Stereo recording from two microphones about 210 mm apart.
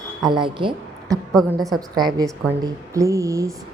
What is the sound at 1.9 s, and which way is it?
A woman's voice, 20° right (ahead or behind).